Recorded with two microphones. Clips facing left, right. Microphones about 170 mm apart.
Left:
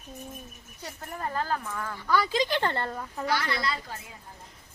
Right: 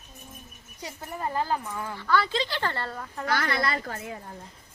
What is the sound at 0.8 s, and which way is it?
Speech, 10° right (ahead or behind).